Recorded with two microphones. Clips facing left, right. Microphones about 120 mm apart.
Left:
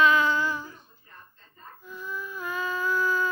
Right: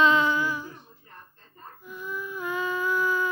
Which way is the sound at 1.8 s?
15° right (ahead or behind).